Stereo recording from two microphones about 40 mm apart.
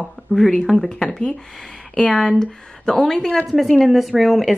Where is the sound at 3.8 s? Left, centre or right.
Centre.